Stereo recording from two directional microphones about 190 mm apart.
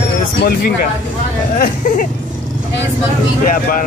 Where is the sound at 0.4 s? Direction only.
55° left (ahead or behind).